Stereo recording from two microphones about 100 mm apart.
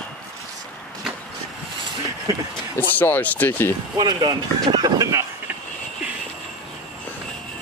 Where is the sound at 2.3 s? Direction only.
30° right (ahead or behind).